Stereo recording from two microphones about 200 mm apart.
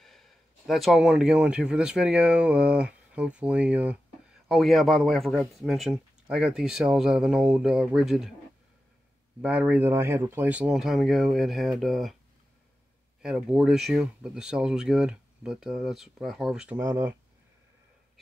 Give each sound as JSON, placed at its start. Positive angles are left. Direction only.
{"t": 0.0, "sound": "speech", "side_deg": 0}
{"t": 9.4, "sound": "speech", "side_deg": -5}
{"t": 13.2, "sound": "speech", "side_deg": -5}